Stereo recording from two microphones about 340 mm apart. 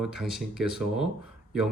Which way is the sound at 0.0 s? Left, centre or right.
Centre.